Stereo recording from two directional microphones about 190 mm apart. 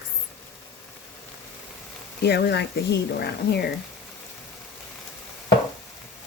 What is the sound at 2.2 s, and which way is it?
Speech, 60° left (ahead or behind).